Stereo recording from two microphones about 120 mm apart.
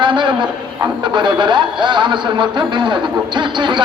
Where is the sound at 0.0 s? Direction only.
40° right (ahead or behind).